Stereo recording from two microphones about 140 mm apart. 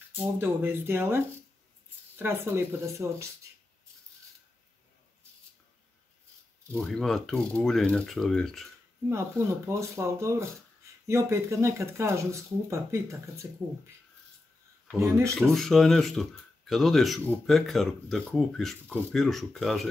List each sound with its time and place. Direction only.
0.1 s speech: 15° right (ahead or behind)
6.7 s speech: 5° left (ahead or behind)
9.7 s speech: 20° right (ahead or behind)
15.0 s speech: 20° right (ahead or behind)
15.5 s speech: centre (ahead or behind)